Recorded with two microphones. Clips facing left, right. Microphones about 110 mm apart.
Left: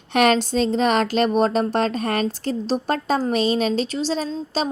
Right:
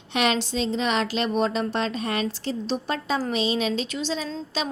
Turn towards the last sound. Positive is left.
turn(degrees=40)  # may be behind; listen again after turning